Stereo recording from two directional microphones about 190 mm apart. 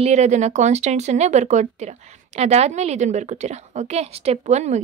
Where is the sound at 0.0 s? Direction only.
35° right (ahead or behind).